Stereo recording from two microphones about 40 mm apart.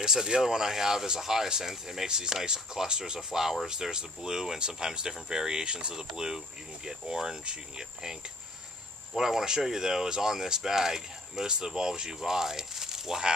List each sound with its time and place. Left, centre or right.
0.0 s speech: centre